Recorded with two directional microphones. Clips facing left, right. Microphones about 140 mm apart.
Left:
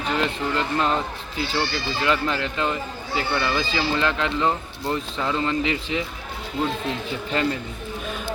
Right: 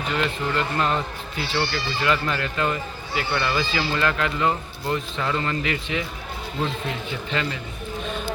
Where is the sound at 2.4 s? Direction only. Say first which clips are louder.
Even; 20° left (ahead or behind).